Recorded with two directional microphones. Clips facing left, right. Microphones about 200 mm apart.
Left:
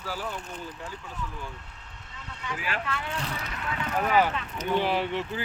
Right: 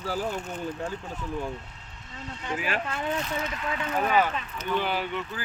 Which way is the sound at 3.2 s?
35° left (ahead or behind).